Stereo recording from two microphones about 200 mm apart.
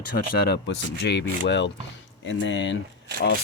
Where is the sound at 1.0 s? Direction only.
60° left (ahead or behind).